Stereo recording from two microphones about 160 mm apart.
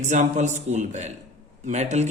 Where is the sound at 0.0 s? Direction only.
50° right (ahead or behind).